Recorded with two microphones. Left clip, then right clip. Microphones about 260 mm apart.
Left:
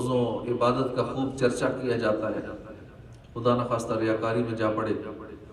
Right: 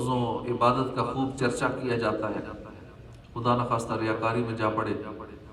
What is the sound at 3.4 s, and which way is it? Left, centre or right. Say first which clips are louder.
A man's voice: left 1 dB; right.